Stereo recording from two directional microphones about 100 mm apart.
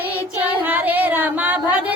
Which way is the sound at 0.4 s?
15° right (ahead or behind).